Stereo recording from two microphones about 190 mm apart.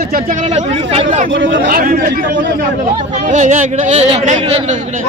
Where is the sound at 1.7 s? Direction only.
50° right (ahead or behind).